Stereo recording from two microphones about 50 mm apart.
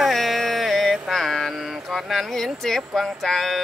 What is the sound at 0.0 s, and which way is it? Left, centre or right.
Mantra, centre.